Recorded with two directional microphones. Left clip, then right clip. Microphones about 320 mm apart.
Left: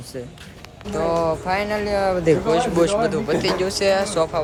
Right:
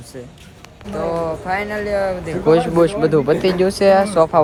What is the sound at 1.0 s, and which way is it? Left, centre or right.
Speech, centre.